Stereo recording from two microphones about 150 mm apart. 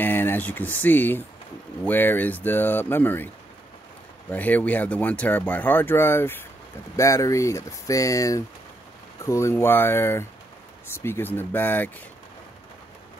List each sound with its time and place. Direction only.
0.0 s speech: 15° left (ahead or behind)
4.3 s speech: 10° left (ahead or behind)